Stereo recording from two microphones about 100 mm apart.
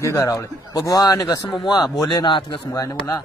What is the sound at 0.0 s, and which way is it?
Speech, 30° left (ahead or behind).